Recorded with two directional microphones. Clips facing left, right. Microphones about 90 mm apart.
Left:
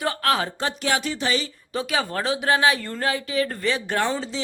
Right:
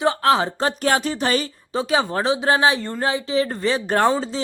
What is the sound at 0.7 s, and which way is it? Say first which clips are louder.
Speech: right 4 dB; 40° right (ahead or behind).